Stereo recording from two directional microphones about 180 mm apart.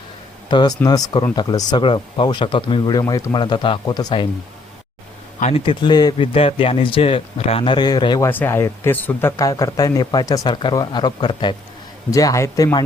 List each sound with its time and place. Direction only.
0.5 s speech: 25° left (ahead or behind)
5.4 s speech: 35° left (ahead or behind)
8.3 s speech: 10° left (ahead or behind)